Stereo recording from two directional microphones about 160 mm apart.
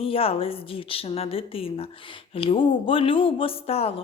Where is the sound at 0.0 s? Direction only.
35° left (ahead or behind).